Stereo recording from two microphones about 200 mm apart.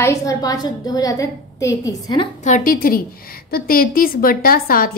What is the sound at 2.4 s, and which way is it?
A woman's voice, 40° left (ahead or behind).